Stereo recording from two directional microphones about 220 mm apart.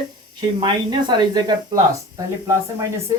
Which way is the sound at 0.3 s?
20° right (ahead or behind).